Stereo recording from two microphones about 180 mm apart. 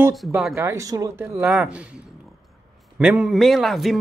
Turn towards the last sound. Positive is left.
turn(degrees=0)  # may be behind; listen again after turning